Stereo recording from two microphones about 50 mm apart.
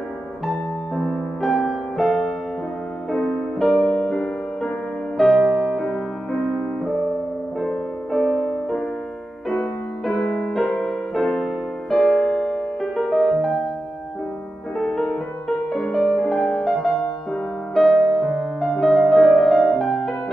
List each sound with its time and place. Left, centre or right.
0.9 s music: centre
6.4 s music: centre
10.0 s music: centre
14.8 s music: centre
18.1 s music: centre